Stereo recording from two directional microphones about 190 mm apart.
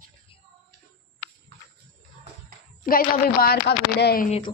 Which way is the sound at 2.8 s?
50° left (ahead or behind).